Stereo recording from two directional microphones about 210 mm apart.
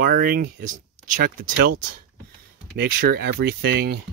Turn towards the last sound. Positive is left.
turn(degrees=-50)  # may be behind; listen again after turning